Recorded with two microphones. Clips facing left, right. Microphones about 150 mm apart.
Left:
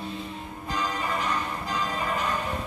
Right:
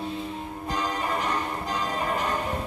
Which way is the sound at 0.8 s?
45° right (ahead or behind).